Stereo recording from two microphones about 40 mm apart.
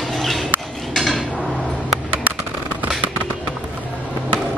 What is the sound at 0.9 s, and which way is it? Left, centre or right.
Dishes, centre.